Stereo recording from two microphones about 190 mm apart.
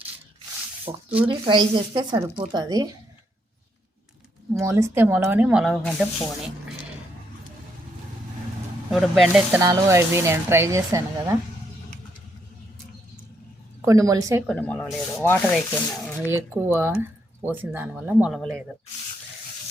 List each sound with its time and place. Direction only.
0.9 s speech: 20° right (ahead or behind)
4.6 s speech: 15° right (ahead or behind)
8.9 s speech: centre (ahead or behind)
9.6 s speech: 15° right (ahead or behind)
13.8 s speech: 15° right (ahead or behind)
14.4 s sanding: 5° left (ahead or behind)
16.3 s speech: 10° right (ahead or behind)